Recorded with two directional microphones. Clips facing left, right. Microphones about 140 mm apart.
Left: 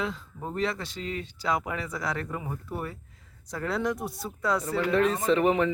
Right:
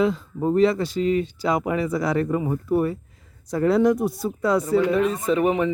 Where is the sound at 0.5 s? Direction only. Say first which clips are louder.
Right 11 dB; 5° right (ahead or behind).